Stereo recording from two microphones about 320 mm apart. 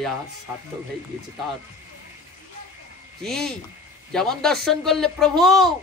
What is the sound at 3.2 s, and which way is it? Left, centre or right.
A man's voice, centre.